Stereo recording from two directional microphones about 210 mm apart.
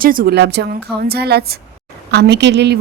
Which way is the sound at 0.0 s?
45° right (ahead or behind).